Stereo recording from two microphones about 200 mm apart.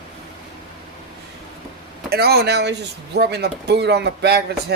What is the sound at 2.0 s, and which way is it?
Speech, 55° right (ahead or behind).